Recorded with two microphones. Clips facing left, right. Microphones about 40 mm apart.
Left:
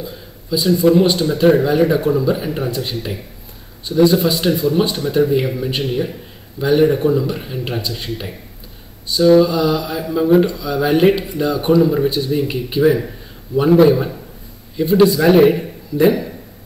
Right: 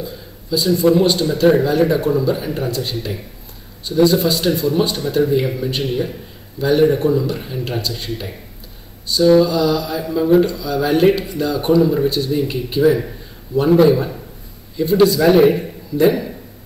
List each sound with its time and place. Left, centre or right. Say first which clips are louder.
0.0 s speech: right 1 dB; centre
9.1 s a man's voice: left 1 dB; centre